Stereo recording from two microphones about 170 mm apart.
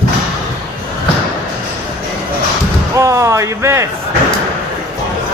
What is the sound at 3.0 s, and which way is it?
Speech, 15° right (ahead or behind).